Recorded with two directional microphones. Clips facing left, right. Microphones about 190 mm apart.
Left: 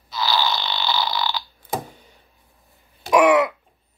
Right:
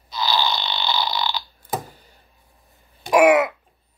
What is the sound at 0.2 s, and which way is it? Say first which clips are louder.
Burping: even; 20° right (ahead or behind).